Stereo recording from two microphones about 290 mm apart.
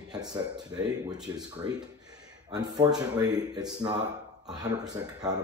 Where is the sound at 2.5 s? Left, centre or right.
Centre.